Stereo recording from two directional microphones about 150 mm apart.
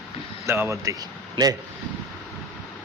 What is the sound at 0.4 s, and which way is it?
A man's voice, 15° right (ahead or behind).